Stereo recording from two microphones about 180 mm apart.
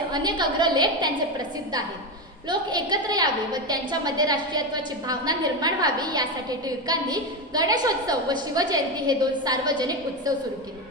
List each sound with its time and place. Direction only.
0.1 s a woman's voice: 25° right (ahead or behind)